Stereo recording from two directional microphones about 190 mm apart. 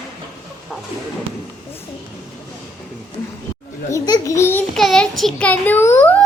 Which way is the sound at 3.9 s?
20° left (ahead or behind).